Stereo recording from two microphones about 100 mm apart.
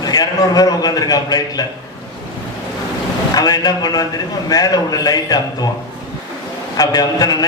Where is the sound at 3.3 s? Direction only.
40° left (ahead or behind).